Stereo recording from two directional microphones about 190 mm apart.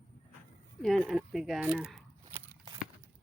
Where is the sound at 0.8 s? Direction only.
Centre (ahead or behind).